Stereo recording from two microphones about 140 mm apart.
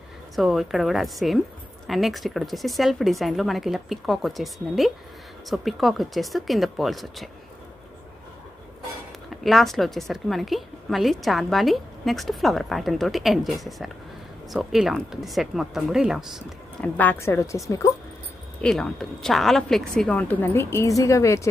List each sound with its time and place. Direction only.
0.4 s a woman's voice: centre (ahead or behind)
9.4 s a woman's voice: centre (ahead or behind)
16.8 s a woman's voice: 10° left (ahead or behind)
18.6 s a woman's voice: 5° left (ahead or behind); by 21.5 s 20° left (ahead or behind)